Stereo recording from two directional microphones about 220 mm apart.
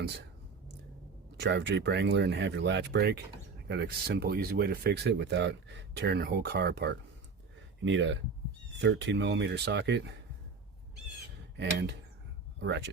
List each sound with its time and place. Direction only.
1.4 s speech: 50° right (ahead or behind)
7.9 s speech: 55° right (ahead or behind)
11.5 s speech: 50° right (ahead or behind)